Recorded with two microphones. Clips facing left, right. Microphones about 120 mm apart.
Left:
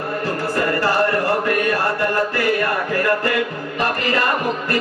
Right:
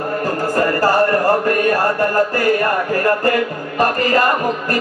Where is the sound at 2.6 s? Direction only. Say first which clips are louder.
Right 3 dB; 40° right (ahead or behind).